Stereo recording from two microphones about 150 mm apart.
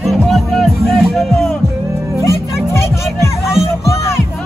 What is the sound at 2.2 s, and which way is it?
Music, 20° left (ahead or behind).